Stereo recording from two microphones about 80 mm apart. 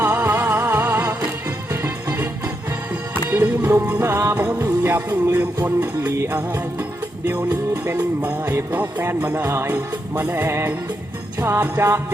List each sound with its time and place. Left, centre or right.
0.0 s music: right
7.5 s music: right
7.9 s music: right